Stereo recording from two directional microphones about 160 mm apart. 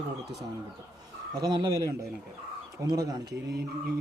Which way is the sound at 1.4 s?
25° right (ahead or behind).